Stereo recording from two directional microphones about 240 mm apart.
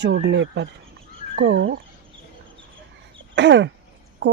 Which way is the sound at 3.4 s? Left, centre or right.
Right.